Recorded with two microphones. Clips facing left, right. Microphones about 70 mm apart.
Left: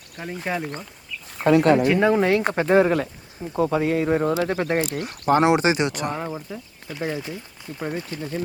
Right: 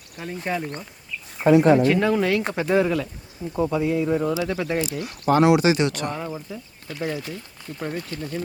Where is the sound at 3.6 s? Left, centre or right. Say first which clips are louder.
Left 1 dB; left.